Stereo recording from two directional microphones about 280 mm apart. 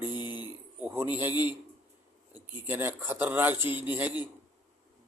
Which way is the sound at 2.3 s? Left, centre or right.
Centre.